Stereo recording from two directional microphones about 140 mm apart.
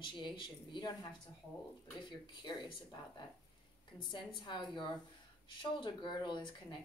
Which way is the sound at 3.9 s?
35° left (ahead or behind).